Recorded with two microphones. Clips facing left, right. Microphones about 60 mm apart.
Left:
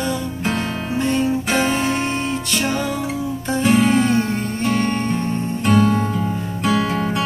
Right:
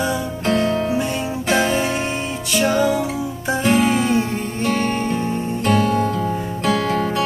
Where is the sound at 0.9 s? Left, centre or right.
Centre.